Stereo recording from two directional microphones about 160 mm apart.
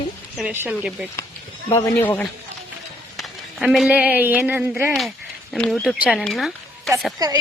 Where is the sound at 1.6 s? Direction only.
20° left (ahead or behind).